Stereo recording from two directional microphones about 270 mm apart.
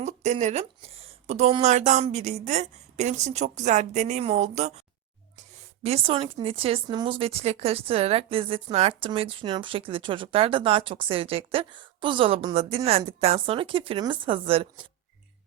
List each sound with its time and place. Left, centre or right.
0.0 s speech: right
5.8 s speech: right